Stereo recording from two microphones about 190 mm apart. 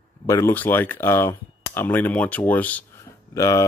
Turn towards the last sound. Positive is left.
turn(degrees=15)  # may be behind; listen again after turning